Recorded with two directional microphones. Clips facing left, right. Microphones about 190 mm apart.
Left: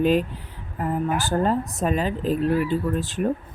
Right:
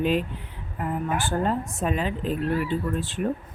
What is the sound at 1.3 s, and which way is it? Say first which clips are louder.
Speech: left 3 dB; 40° left (ahead or behind).